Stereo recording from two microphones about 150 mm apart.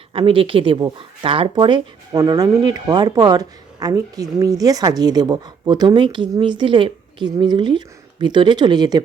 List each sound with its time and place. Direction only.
0.1 s speech: 35° right (ahead or behind)